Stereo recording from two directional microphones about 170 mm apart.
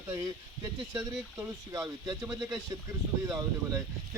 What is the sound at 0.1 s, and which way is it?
Speech, 15° right (ahead or behind).